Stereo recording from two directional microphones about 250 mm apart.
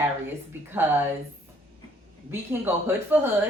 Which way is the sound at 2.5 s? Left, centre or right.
Centre.